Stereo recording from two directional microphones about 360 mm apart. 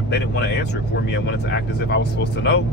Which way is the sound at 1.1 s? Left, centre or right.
Left.